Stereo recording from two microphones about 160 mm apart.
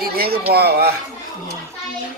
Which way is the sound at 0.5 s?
80° right.